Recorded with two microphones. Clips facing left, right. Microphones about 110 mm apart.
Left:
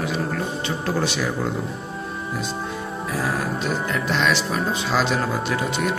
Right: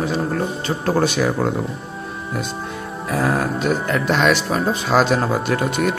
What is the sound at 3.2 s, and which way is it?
Speech, 50° right (ahead or behind).